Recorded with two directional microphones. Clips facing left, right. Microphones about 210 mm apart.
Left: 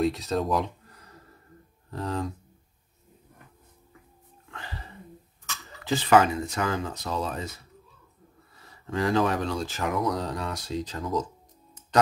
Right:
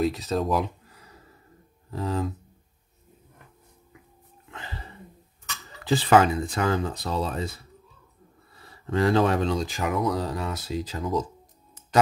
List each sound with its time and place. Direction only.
0.0 s speech: centre (ahead or behind)
5.9 s speech: 35° right (ahead or behind)
8.9 s speech: 30° right (ahead or behind)
9.8 s speech: centre (ahead or behind)